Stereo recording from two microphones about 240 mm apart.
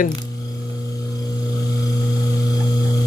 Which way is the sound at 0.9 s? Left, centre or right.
Centre.